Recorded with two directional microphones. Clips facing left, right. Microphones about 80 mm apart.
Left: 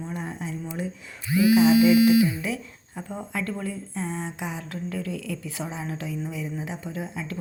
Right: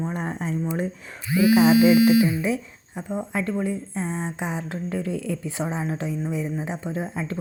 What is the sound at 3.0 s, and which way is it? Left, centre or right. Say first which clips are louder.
Speech: right 4 dB; centre.